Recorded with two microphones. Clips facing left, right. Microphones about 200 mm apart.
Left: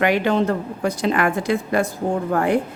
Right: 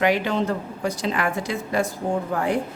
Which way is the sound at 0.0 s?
60° left (ahead or behind).